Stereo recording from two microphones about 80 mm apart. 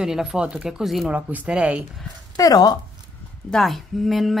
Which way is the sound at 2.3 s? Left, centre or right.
Left.